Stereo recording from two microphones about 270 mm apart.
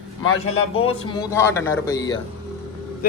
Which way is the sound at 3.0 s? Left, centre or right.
Left.